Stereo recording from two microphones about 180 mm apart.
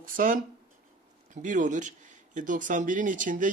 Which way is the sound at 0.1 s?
50° right (ahead or behind).